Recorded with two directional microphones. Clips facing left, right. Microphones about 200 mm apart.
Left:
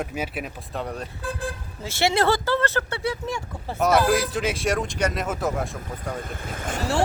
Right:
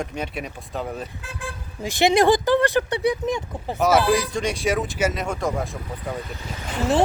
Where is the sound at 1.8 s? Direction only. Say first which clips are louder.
Right 4 dB; 15° right (ahead or behind).